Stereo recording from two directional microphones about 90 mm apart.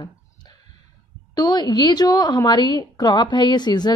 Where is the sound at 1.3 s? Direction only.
50° left (ahead or behind).